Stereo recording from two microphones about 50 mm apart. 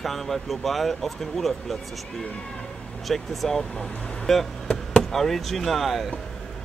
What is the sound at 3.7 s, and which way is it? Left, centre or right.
Speech, centre.